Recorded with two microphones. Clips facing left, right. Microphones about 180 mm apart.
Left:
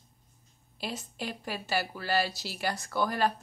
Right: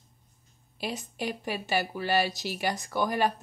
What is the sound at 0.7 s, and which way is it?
Speech, 15° right (ahead or behind).